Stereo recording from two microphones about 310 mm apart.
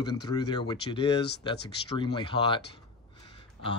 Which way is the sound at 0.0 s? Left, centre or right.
Centre.